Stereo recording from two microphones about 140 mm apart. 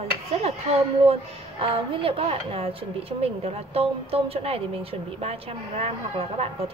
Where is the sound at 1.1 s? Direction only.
40° right (ahead or behind).